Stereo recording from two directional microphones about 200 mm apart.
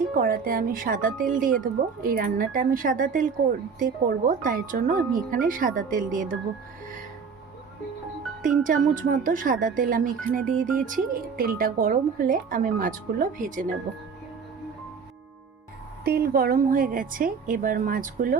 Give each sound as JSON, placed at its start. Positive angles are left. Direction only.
{"t": 0.2, "sound": "speech", "side_deg": -45}
{"t": 8.6, "sound": "speech", "side_deg": -40}
{"t": 16.0, "sound": "speech", "side_deg": -50}